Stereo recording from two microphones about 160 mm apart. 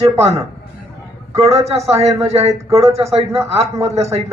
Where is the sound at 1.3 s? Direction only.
40° right (ahead or behind).